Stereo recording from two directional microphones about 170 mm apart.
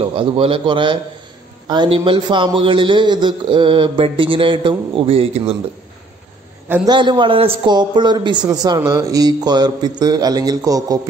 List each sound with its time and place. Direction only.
0.0 s a man's voice: 30° right (ahead or behind)
6.9 s a man's voice: 25° right (ahead or behind)